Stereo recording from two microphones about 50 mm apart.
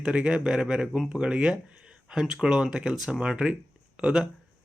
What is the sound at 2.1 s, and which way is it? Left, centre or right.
A man's voice, centre.